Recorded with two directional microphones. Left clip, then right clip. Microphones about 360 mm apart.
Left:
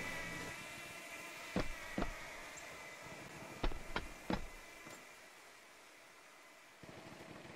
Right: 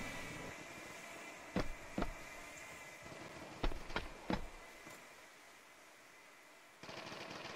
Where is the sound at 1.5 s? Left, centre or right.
Centre.